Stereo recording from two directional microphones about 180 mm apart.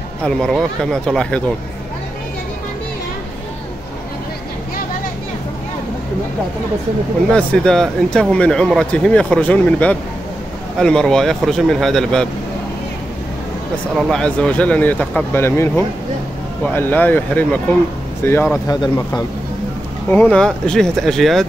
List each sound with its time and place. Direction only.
0.2 s speech: 5° left (ahead or behind)
7.3 s speech: 5° left (ahead or behind)
13.9 s speech: 5° left (ahead or behind); by 19.2 s 20° left (ahead or behind)
20.1 s speech: 5° left (ahead or behind)